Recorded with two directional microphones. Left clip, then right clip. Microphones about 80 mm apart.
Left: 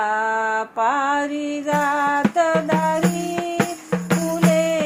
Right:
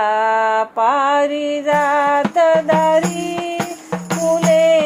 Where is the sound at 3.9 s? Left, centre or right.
Right.